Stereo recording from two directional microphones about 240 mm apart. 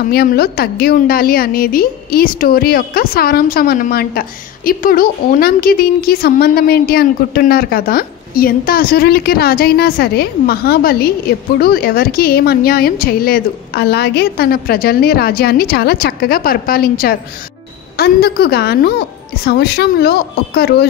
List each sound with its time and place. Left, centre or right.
0.0 s a woman's voice: left